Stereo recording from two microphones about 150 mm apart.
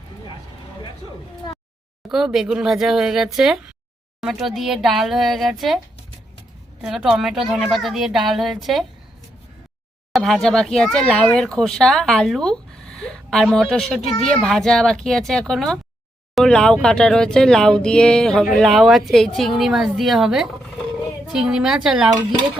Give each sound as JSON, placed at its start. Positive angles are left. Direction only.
{"t": 2.0, "sound": "speech", "side_deg": -5}
{"t": 6.8, "sound": "speech", "side_deg": -5}
{"t": 10.1, "sound": "speech", "side_deg": 0}